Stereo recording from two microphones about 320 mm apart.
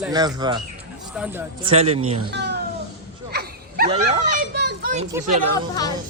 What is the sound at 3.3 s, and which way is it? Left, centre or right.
Dog, right.